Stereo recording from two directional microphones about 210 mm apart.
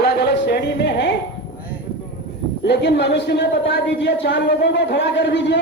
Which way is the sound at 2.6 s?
55° left (ahead or behind).